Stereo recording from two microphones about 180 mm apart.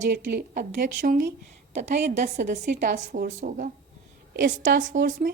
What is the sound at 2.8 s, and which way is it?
Speech, 55° right (ahead or behind).